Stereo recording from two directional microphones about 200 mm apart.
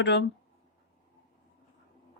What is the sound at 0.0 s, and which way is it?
Speech, 60° left (ahead or behind).